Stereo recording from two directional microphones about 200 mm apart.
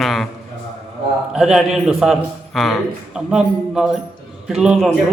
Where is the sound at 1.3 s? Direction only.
Centre (ahead or behind).